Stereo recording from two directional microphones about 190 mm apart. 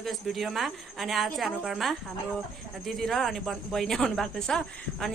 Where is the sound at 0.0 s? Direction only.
Centre (ahead or behind).